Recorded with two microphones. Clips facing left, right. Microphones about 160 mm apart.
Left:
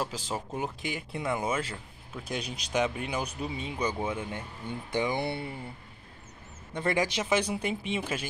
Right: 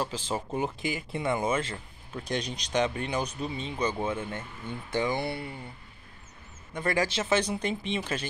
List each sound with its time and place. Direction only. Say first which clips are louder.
0.1 s speech: right 3 dB; centre (ahead or behind); by 5.6 s 25° left (ahead or behind)
6.7 s speech: even; 25° left (ahead or behind); by 8.3 s 10° left (ahead or behind)